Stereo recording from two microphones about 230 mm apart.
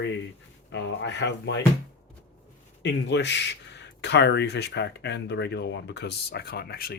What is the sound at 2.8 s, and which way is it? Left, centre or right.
Speech, left.